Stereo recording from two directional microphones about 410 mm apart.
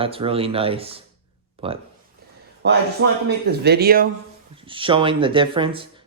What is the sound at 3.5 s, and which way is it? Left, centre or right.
Speech, right.